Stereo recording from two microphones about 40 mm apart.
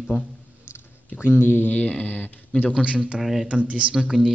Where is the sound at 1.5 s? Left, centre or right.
Left.